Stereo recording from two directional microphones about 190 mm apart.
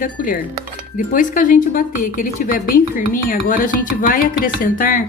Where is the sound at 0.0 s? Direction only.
45° left (ahead or behind).